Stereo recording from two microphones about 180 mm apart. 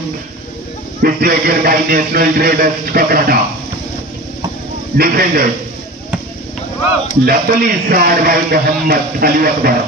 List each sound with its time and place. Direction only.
1.0 s a man's voice: 55° right (ahead or behind)
4.9 s a man's voice: 55° right (ahead or behind)
7.2 s a man's voice: 55° right (ahead or behind)